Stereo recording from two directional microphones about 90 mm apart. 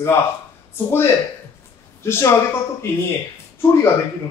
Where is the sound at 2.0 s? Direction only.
30° left (ahead or behind).